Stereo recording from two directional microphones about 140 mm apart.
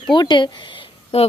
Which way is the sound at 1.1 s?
45° left (ahead or behind).